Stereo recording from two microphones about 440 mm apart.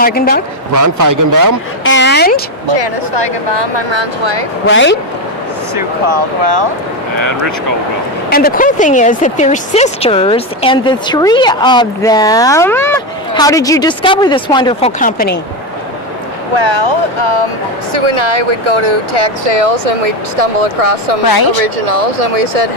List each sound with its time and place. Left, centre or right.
0.0 s speech: centre
0.7 s a man's voice: right
1.9 s a sound: left
2.7 s speech: right
4.6 s speech: left
6.0 s speech: right
7.2 s speech: right
8.3 s speech: centre
16.5 s speech: right
21.3 s speech: left